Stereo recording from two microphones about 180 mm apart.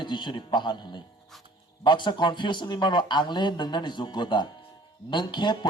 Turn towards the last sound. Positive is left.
turn(degrees=25)  # may be behind; listen again after turning